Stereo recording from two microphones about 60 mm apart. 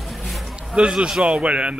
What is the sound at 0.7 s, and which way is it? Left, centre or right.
Speech, centre.